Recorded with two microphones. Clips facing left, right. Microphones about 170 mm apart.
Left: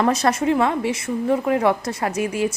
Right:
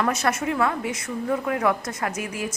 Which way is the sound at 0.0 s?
35° left (ahead or behind).